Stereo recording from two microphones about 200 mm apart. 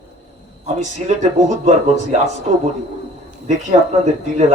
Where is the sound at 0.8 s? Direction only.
35° right (ahead or behind).